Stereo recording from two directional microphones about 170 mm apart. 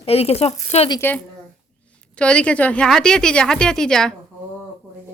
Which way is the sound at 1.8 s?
5° left (ahead or behind).